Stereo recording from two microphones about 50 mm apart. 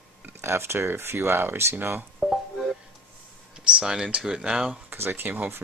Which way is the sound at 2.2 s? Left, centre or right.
Centre.